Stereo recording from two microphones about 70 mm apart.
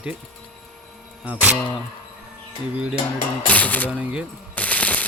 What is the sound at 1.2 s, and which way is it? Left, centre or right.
Mantra, right.